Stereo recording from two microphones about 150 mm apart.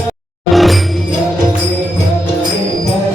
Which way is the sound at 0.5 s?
Centre (ahead or behind).